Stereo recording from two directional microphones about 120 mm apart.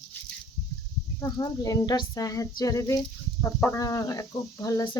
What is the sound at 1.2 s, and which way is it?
Speech, 35° left (ahead or behind).